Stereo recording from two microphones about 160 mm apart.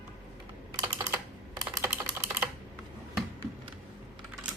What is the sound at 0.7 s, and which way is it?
Typing, 20° right (ahead or behind).